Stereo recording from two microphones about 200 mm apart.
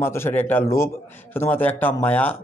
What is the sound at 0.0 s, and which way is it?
Speech, 10° left (ahead or behind).